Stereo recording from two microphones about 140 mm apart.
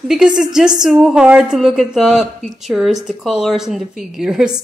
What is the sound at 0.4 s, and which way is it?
Speech, 5° right (ahead or behind).